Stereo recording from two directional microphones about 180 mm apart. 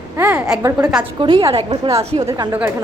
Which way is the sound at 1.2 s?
25° right (ahead or behind).